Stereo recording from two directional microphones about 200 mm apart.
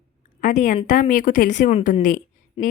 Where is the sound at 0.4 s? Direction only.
40° left (ahead or behind).